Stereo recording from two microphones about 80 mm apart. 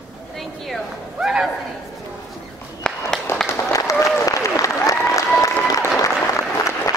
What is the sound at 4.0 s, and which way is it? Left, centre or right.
Applause, left.